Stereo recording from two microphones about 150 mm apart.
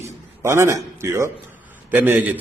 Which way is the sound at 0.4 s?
15° right (ahead or behind).